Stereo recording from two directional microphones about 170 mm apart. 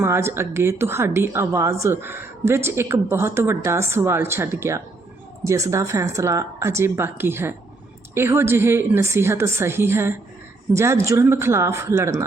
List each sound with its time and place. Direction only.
0.0 s a woman's voice: 15° right (ahead or behind)